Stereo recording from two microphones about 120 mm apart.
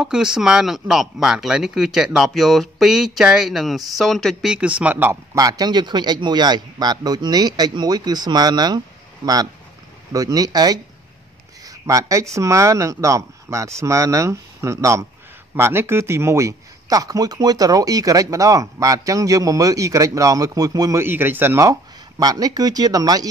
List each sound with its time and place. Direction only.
0.0 s speech: 5° right (ahead or behind)
5.3 s a man's voice: 30° right (ahead or behind)
11.6 s a sound: 25° right (ahead or behind)
12.4 s speech: 25° right (ahead or behind)
21.0 s a man's voice: 15° right (ahead or behind)
22.2 s a man's voice: 30° right (ahead or behind)